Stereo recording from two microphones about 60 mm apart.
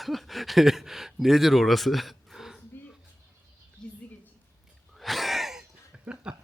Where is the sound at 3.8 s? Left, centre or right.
Centre.